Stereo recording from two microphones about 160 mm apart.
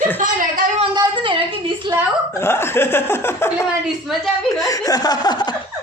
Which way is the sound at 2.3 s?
15° left (ahead or behind).